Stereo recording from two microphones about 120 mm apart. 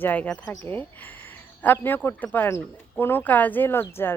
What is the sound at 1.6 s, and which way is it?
Speech, 15° left (ahead or behind).